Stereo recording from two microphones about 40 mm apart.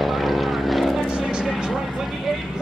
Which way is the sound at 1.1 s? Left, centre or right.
Right.